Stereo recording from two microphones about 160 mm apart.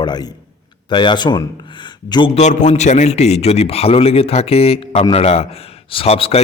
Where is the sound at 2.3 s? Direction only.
50° left (ahead or behind).